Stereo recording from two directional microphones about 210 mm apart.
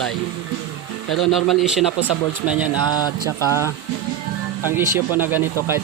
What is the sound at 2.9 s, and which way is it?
Mantra, 20° left (ahead or behind).